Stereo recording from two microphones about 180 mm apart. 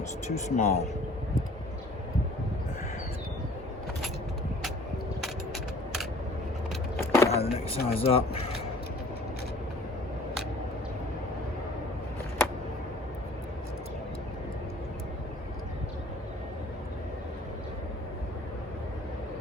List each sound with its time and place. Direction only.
0.3 s speech: 40° left (ahead or behind)
7.1 s vehicle: 15° left (ahead or behind)
7.3 s speech: 35° left (ahead or behind)